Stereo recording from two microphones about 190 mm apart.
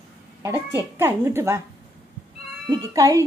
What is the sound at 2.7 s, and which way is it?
Speech, 20° right (ahead or behind).